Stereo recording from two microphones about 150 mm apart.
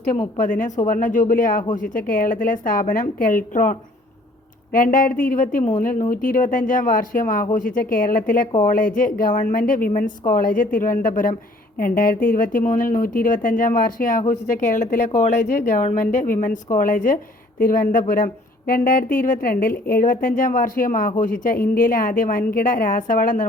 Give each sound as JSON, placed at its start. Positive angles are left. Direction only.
{"t": 0.3, "sound": "a woman's voice", "side_deg": 60}